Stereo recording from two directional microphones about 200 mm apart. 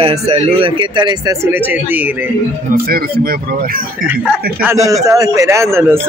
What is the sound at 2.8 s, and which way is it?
Speech, 50° right (ahead or behind).